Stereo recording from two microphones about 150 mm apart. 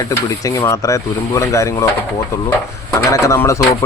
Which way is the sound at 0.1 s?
20° left (ahead or behind).